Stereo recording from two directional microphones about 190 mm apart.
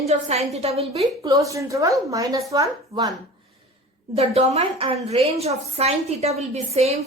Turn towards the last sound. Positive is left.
turn(degrees=-35)  # may be behind; listen again after turning